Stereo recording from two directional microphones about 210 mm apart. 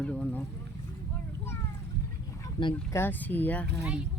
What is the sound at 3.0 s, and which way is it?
Speech, 10° left (ahead or behind).